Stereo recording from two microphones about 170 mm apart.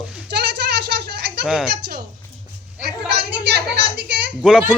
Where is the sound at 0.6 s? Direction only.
80° right.